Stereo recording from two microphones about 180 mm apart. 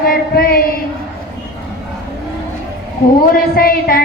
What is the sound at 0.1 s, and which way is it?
Child singing, 55° left (ahead or behind).